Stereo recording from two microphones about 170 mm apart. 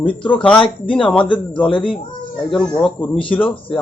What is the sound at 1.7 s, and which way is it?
Speech, 30° left (ahead or behind).